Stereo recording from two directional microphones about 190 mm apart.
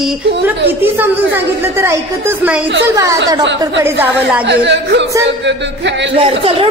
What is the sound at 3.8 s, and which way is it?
Speech, 10° right (ahead or behind).